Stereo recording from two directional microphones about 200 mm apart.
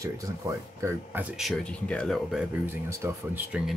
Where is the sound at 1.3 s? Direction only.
Centre (ahead or behind).